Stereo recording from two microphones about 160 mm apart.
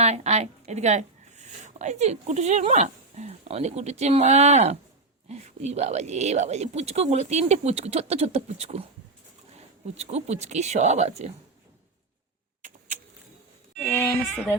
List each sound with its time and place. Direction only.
0.0 s speech: 45° right (ahead or behind)
13.8 s speech: 15° left (ahead or behind)